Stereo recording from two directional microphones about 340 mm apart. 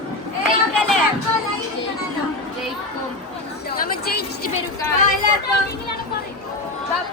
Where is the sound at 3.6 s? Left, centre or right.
Left.